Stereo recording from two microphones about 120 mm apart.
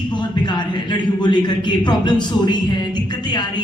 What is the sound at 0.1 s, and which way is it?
A man's voice, 40° left (ahead or behind).